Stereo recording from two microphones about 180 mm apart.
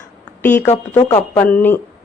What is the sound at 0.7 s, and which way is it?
Speech, 25° left (ahead or behind).